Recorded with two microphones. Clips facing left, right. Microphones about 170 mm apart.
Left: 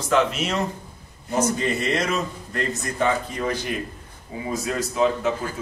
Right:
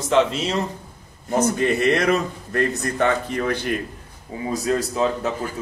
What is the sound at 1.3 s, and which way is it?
A man's voice, 60° right (ahead or behind).